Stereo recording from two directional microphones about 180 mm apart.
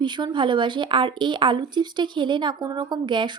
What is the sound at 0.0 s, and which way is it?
Speech, 25° right (ahead or behind).